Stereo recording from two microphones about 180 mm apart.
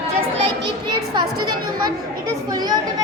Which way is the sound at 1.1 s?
25° right (ahead or behind).